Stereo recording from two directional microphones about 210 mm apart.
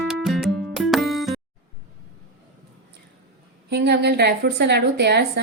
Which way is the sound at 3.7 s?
50° right (ahead or behind).